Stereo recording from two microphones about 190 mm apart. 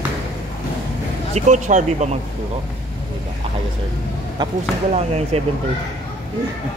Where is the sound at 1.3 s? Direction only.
40° right (ahead or behind).